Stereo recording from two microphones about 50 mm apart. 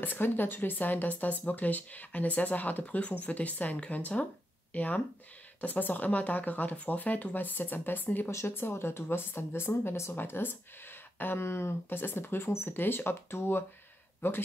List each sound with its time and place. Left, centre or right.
0.0 s speech: left
8.3 s speech: left
11.9 s speech: left